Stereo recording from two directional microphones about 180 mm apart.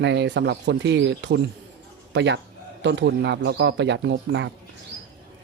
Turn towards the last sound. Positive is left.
turn(degrees=-85)